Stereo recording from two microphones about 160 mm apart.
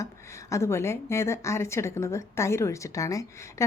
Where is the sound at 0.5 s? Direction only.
15° left (ahead or behind).